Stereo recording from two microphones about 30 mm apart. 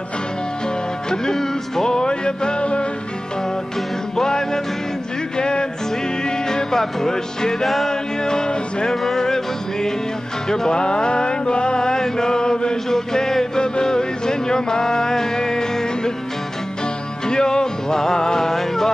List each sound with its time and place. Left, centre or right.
1.1 s music: centre; by 2.9 s left
4.2 s music: centre
7.6 s music: centre
7.9 s music: left
10.8 s mantra: left
12.9 s chant: centre
13.6 s music: left
17.3 s music: left
18.5 s music: centre